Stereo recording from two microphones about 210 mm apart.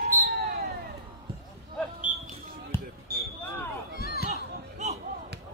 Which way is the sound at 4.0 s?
45° left (ahead or behind).